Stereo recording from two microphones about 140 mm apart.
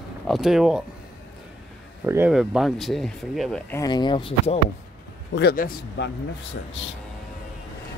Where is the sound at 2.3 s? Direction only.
5° right (ahead or behind).